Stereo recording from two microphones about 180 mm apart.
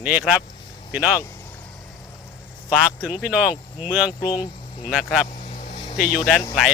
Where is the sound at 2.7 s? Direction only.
Centre (ahead or behind).